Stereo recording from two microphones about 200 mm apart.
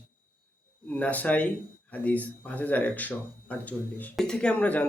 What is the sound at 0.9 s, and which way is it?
A man's voice, 5° left (ahead or behind).